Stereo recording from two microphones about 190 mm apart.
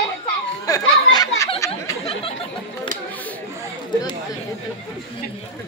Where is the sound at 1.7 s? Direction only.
30° left (ahead or behind).